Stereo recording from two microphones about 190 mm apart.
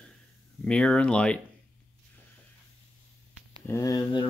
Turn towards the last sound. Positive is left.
turn(degrees=20)  # may be behind; listen again after turning